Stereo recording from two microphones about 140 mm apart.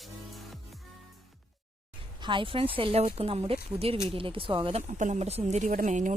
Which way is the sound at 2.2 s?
35° right (ahead or behind).